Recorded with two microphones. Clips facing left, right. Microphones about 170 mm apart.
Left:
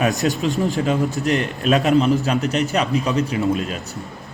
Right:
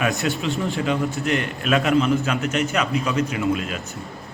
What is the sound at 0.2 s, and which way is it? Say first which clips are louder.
A man's voice: left 4 dB; 35° left (ahead or behind).